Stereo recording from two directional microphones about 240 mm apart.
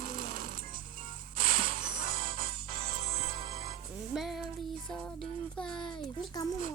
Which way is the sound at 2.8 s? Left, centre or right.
Right.